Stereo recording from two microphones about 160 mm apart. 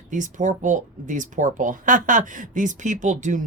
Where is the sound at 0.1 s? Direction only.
50° right (ahead or behind).